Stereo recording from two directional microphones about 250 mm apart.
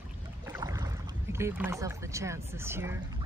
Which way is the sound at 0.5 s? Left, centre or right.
Centre.